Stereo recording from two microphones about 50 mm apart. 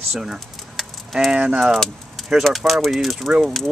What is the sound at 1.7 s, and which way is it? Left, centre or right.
Keys jangling, centre.